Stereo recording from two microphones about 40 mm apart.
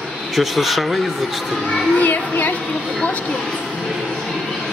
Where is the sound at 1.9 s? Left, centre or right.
Left.